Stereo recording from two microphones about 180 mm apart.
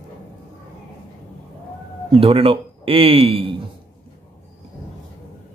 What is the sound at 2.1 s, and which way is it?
Speech, 30° right (ahead or behind).